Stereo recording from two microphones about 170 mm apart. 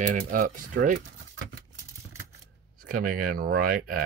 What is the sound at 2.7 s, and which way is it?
Speech, 55° right (ahead or behind).